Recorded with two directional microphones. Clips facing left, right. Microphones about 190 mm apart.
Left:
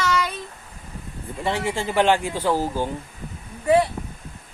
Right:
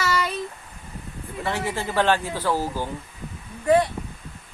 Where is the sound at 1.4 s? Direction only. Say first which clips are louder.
Left 2 dB; 20° left (ahead or behind).